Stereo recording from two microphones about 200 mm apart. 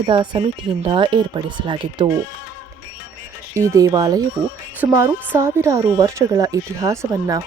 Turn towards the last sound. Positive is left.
turn(degrees=-15)  # may be behind; listen again after turning